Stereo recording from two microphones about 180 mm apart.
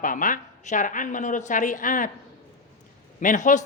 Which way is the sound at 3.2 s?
45° left (ahead or behind).